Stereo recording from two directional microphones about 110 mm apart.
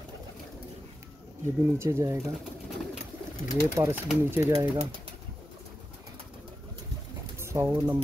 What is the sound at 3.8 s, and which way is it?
Speech, 25° right (ahead or behind).